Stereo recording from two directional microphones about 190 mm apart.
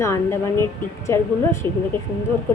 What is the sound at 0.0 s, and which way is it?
A woman's voice, 15° left (ahead or behind).